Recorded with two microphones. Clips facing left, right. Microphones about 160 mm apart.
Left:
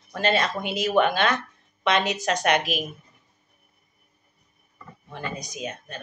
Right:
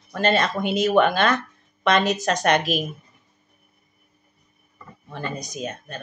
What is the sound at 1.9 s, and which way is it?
Speech, 45° right (ahead or behind).